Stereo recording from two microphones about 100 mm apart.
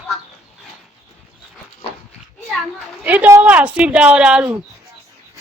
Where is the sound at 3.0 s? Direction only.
15° right (ahead or behind).